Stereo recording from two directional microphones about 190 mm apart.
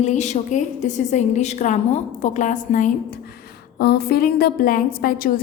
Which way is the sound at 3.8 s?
55° left (ahead or behind).